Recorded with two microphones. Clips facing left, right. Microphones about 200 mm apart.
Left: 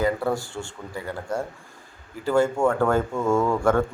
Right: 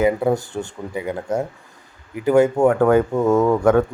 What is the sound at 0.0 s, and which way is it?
Speech, 20° right (ahead or behind).